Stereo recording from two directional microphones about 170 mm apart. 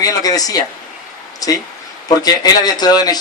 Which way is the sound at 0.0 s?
20° left (ahead or behind).